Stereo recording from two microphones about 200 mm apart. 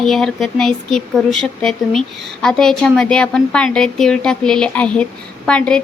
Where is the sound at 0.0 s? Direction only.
Centre (ahead or behind).